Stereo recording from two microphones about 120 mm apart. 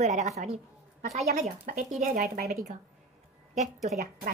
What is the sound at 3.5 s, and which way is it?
Speech, 75° right (ahead or behind).